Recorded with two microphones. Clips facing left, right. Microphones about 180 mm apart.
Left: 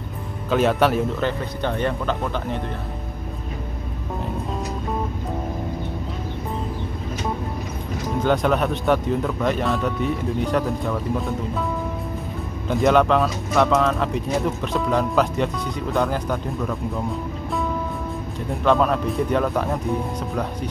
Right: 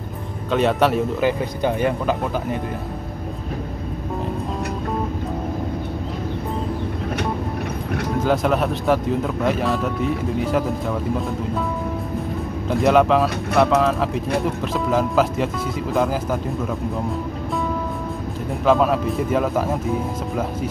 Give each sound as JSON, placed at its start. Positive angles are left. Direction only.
{"t": 0.5, "sound": "speech", "side_deg": 0}
{"t": 8.2, "sound": "speech", "side_deg": 0}
{"t": 12.6, "sound": "speech", "side_deg": 0}
{"t": 18.6, "sound": "speech", "side_deg": -5}